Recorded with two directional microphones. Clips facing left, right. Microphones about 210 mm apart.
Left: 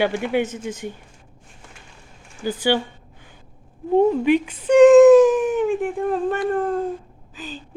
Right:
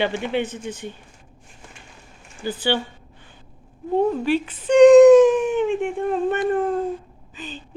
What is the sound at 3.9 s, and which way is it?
Speech, 15° left (ahead or behind).